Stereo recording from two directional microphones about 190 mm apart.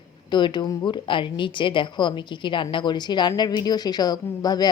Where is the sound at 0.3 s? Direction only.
25° left (ahead or behind).